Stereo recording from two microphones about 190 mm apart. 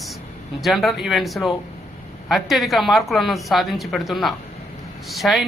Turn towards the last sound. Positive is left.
turn(degrees=0)  # may be behind; listen again after turning